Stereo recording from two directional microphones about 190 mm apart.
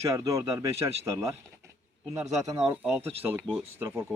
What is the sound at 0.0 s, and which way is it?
Speech, 15° right (ahead or behind).